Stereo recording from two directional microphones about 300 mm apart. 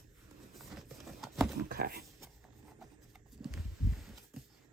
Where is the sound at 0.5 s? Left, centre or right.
Centre.